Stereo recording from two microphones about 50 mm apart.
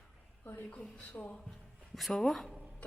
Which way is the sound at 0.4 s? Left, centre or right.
Left.